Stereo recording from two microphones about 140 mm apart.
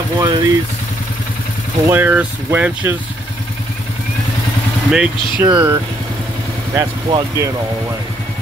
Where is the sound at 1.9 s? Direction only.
15° right (ahead or behind).